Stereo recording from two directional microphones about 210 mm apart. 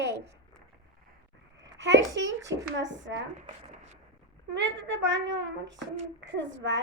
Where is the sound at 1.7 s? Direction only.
60° right (ahead or behind).